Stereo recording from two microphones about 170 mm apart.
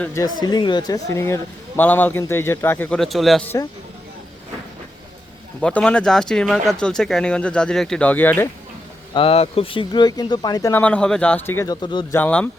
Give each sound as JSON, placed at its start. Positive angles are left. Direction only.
{"t": 0.0, "sound": "speech", "side_deg": 20}
{"t": 5.5, "sound": "speech", "side_deg": 5}
{"t": 9.1, "sound": "speech", "side_deg": 35}
{"t": 12.1, "sound": "speech", "side_deg": 10}